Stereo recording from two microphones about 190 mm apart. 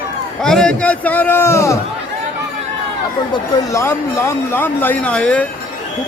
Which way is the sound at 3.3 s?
15° left (ahead or behind).